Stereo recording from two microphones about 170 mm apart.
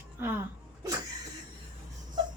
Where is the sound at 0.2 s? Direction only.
10° right (ahead or behind).